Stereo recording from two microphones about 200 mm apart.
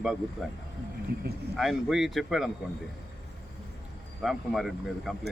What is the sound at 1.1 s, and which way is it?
Speech, 50° right (ahead or behind).